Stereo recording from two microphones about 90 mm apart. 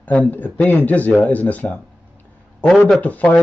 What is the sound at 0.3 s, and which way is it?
Speech, 20° left (ahead or behind).